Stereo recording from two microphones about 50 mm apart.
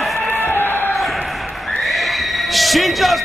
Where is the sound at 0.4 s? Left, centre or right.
Left.